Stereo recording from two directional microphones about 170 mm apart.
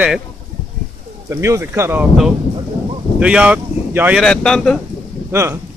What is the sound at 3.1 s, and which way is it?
Speech, 5° right (ahead or behind).